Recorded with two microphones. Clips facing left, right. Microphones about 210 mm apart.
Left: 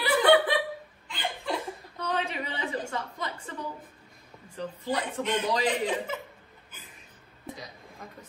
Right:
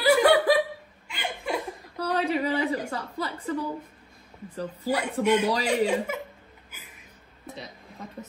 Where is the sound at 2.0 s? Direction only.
35° right (ahead or behind).